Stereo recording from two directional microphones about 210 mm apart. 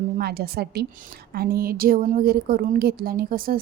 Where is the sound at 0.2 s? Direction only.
50° right (ahead or behind).